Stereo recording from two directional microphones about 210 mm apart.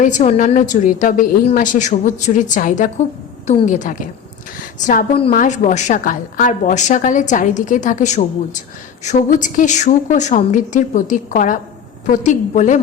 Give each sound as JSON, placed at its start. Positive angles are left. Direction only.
{"t": 0.0, "sound": "a woman's voice", "side_deg": 35}